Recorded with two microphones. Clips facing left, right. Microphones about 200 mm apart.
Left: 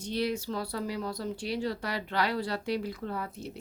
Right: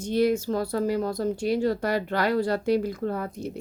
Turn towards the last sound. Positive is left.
turn(degrees=-45)  # may be behind; listen again after turning